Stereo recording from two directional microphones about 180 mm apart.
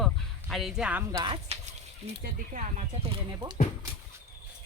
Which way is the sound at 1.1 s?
25° right (ahead or behind).